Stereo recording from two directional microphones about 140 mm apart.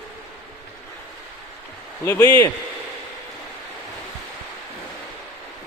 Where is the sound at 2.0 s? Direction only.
15° left (ahead or behind).